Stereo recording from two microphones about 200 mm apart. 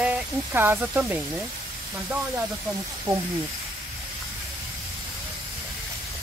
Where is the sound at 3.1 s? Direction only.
15° right (ahead or behind).